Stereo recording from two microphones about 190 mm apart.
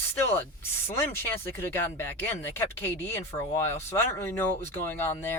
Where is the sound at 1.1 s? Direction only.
10° left (ahead or behind).